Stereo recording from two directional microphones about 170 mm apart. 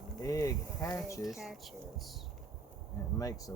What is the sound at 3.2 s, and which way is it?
Speech, 20° left (ahead or behind).